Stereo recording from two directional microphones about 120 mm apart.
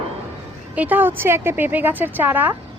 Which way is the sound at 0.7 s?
15° right (ahead or behind).